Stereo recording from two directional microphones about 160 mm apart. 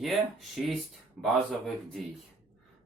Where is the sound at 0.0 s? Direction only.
Centre (ahead or behind).